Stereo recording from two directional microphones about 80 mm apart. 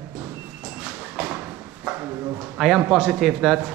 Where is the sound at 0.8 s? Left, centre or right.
Centre.